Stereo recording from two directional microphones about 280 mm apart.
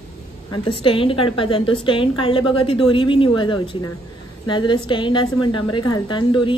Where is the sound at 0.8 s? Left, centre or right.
Centre.